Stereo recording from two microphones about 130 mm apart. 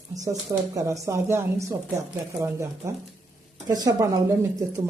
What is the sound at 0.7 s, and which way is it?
Speech, 25° right (ahead or behind).